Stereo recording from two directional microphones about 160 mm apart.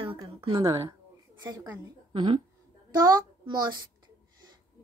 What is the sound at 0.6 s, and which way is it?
A child's voice, 20° right (ahead or behind).